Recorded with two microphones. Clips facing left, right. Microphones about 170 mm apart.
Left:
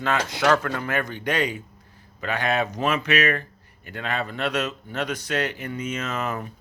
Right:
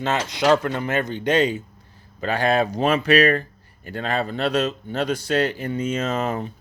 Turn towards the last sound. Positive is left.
turn(degrees=-30)  # may be behind; listen again after turning